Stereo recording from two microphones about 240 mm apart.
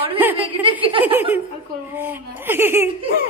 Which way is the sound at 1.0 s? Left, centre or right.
Centre.